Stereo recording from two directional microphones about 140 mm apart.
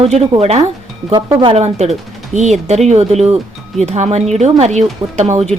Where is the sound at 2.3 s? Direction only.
55° right (ahead or behind).